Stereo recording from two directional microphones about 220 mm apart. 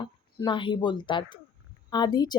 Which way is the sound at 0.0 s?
20° left (ahead or behind).